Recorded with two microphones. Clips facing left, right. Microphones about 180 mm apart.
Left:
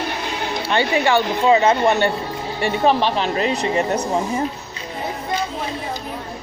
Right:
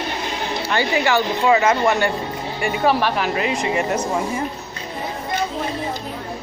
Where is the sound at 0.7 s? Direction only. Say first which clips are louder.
Left 2 dB; 25° left (ahead or behind).